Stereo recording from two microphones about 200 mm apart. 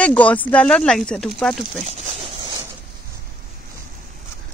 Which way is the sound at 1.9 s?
30° right (ahead or behind).